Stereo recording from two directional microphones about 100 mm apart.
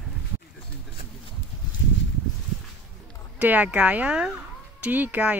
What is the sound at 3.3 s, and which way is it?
Speech, 15° right (ahead or behind).